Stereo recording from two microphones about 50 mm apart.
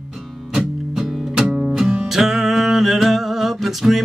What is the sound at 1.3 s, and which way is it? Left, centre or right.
Music, centre.